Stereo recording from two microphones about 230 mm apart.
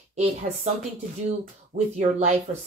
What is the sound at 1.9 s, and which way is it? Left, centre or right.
Speech, right.